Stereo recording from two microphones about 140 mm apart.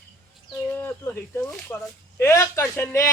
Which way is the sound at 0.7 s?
15° left (ahead or behind).